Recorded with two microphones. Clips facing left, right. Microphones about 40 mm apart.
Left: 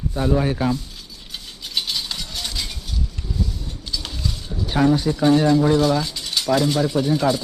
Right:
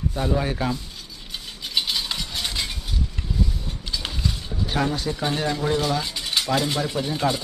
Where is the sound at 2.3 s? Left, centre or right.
Right.